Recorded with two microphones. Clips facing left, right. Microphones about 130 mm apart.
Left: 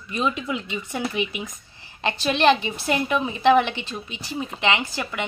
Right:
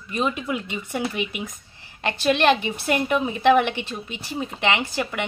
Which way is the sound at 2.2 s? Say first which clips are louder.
Even; 55° right (ahead or behind).